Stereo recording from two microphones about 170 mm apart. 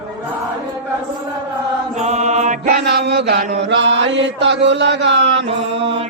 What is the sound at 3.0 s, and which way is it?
Chant, 80° right.